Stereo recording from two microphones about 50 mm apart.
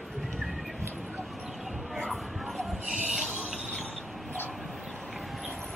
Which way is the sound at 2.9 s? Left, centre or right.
Right.